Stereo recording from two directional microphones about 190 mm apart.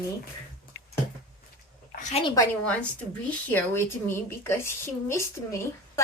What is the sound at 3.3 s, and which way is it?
A woman's voice, 10° left (ahead or behind).